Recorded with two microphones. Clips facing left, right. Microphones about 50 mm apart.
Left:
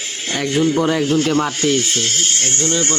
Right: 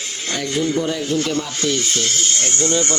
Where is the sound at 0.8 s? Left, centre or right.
Left.